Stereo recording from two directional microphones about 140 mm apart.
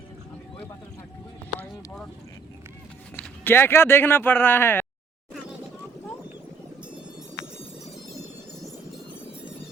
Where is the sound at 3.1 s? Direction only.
10° left (ahead or behind).